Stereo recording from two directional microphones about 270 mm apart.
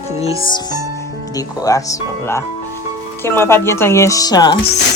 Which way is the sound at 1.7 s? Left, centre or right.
Centre.